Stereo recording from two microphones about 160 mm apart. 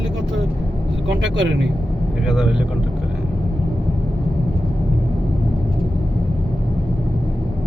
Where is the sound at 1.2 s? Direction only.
90° right.